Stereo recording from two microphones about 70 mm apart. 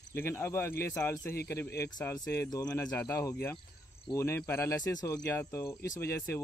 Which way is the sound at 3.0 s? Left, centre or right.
Left.